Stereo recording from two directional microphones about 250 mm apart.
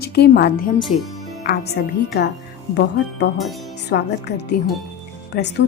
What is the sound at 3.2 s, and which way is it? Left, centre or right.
A woman's voice, left.